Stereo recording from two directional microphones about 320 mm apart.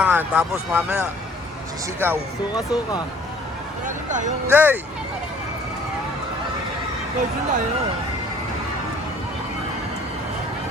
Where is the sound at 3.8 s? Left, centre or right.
Right.